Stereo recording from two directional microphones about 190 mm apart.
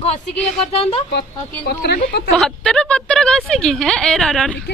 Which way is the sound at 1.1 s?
55° left (ahead or behind).